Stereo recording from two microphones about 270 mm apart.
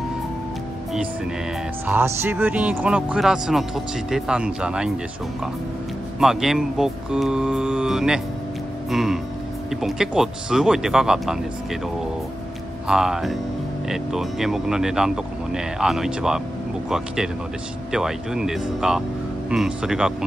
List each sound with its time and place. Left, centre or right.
1.9 s speech: centre
6.1 s speech: centre
12.8 s speech: centre